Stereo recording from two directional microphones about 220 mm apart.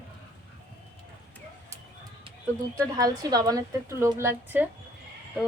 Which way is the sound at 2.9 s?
15° right (ahead or behind).